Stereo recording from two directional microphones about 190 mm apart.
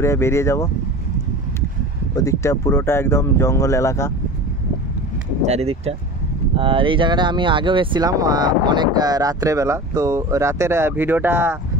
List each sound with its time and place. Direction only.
0.0 s speech: 15° left (ahead or behind)
2.1 s speech: 15° left (ahead or behind)
5.4 s speech: 35° right (ahead or behind); by 11.5 s 10° right (ahead or behind)